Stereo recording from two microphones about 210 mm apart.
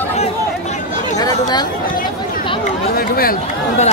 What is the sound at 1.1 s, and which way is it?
Chatter, 20° left (ahead or behind).